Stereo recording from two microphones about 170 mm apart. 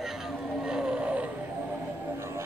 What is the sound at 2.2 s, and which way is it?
Music, 15° right (ahead or behind).